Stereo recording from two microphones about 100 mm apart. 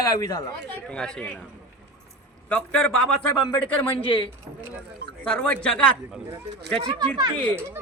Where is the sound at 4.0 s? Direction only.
65° left (ahead or behind).